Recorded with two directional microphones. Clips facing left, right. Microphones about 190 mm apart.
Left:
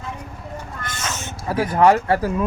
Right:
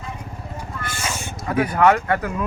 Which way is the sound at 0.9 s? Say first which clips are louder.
Right 1 dB; 10° right (ahead or behind).